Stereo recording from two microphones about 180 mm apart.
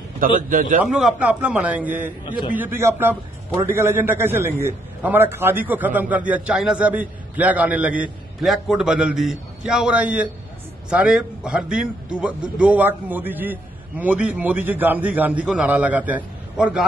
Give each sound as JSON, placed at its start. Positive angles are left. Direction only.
{"t": 0.5, "sound": "a man's voice", "side_deg": -45}
{"t": 0.8, "sound": "a man's voice", "side_deg": 0}